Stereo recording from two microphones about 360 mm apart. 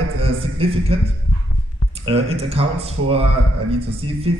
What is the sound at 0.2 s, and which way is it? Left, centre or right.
Speech, centre.